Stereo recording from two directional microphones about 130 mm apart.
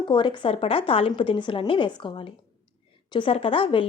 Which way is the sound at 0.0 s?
40° left (ahead or behind).